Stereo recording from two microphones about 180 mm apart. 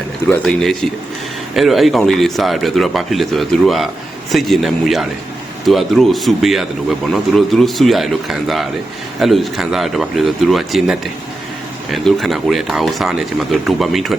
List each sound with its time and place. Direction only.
0.4 s speech: centre (ahead or behind)